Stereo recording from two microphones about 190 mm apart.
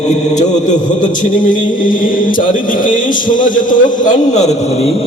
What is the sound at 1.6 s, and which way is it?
Speech, 45° left (ahead or behind).